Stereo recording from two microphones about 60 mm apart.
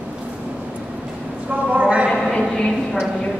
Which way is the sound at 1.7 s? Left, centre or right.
Right.